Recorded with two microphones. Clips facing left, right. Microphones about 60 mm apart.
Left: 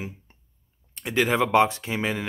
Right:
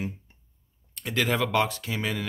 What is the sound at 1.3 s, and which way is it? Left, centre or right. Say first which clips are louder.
Speech: left 7 dB; left.